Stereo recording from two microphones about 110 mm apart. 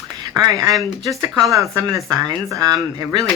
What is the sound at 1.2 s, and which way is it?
Speech, 30° right (ahead or behind).